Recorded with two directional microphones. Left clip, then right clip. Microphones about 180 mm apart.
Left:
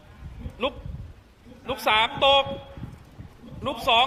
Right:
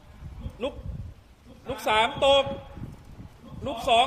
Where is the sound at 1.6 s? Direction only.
10° right (ahead or behind).